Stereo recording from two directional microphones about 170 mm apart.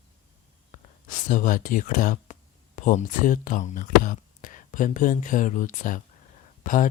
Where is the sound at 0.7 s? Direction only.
50° left (ahead or behind).